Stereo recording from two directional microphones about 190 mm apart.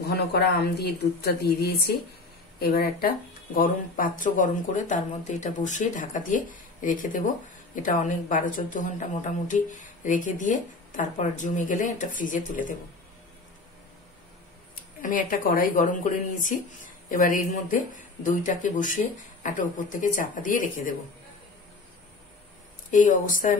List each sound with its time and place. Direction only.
0.1 s a woman's voice: 60° left (ahead or behind)
15.0 s a woman's voice: 45° left (ahead or behind)
22.8 s speech: 40° left (ahead or behind)